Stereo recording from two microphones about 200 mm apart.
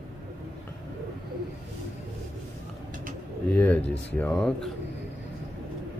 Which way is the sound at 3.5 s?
10° left (ahead or behind).